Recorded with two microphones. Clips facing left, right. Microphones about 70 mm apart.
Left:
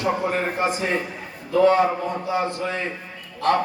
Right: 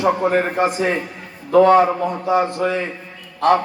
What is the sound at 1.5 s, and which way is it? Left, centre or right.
A man's voice, right.